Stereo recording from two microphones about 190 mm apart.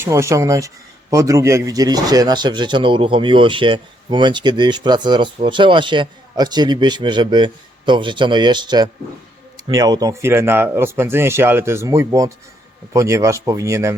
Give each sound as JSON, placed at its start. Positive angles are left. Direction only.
{"t": 0.0, "sound": "speech", "side_deg": -15}